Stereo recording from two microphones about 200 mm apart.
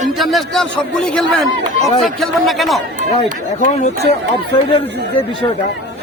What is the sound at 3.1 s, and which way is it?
Speech, 35° left (ahead or behind).